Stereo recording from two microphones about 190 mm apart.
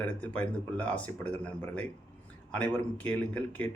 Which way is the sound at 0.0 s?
5° left (ahead or behind).